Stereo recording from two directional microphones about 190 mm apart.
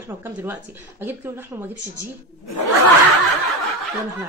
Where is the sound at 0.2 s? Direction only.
10° right (ahead or behind).